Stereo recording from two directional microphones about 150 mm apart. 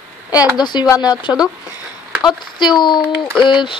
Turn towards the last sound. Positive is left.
turn(degrees=30)  # may be behind; listen again after turning